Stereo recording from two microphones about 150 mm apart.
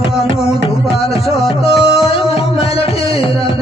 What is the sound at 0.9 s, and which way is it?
Music, 40° left (ahead or behind).